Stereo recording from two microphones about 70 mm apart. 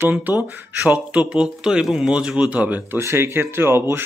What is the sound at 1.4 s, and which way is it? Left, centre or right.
Speech, centre.